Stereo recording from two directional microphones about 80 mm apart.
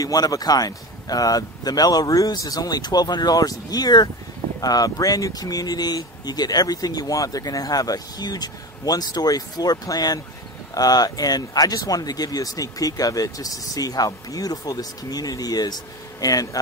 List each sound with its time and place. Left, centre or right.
0.0 s speech: left